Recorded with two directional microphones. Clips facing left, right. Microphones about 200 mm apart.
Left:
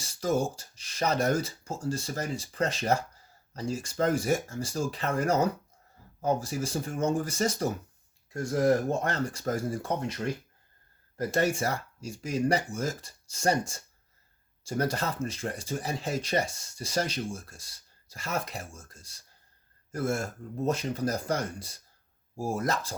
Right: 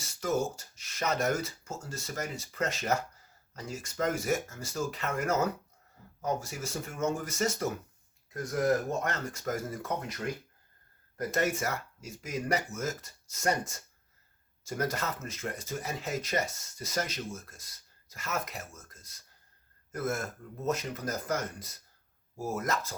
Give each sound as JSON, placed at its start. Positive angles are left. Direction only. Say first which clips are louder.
{"t": 0.0, "sound": "speech", "louder": "left 3 dB", "side_deg": 35}
{"t": 11.2, "sound": "speech", "louder": "left 3 dB", "side_deg": 30}